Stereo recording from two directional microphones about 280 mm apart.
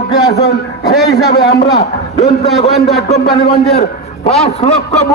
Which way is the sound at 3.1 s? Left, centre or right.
Left.